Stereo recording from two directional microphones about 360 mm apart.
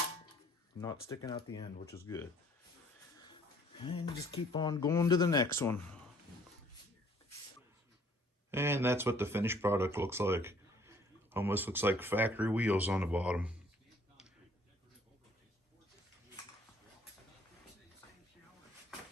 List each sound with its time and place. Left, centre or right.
0.8 s speech: centre
8.4 s speech: centre